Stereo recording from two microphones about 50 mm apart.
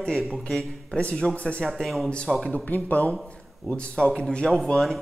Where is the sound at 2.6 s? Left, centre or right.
Left.